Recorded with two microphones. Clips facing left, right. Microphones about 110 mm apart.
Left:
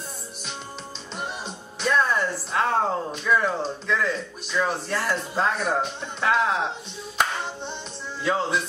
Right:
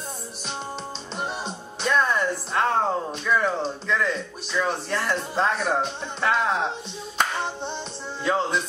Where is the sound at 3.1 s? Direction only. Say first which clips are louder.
Even; centre (ahead or behind).